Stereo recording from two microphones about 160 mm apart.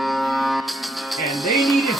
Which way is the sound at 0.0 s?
Centre (ahead or behind).